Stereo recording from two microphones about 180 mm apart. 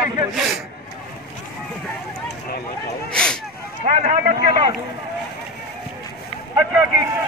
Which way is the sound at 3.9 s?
45° right (ahead or behind).